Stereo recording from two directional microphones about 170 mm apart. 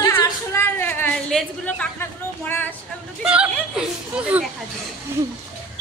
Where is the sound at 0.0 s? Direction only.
15° left (ahead or behind).